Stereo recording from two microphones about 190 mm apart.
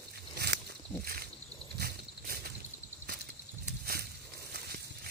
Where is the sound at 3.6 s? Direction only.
55° right (ahead or behind).